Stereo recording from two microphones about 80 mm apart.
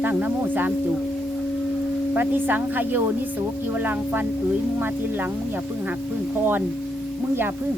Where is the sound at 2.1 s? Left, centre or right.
Right.